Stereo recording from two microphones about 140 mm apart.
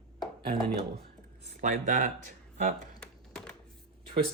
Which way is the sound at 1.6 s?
65° right (ahead or behind).